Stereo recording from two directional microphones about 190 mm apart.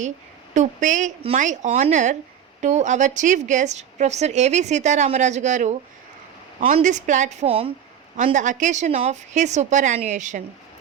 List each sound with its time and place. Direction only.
0.5 s a woman's voice: 40° right (ahead or behind)
6.7 s a woman's voice: 40° right (ahead or behind)
8.1 s a woman's voice: 40° right (ahead or behind)